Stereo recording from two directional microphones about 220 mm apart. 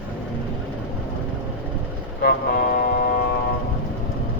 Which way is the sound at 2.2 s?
45° left (ahead or behind).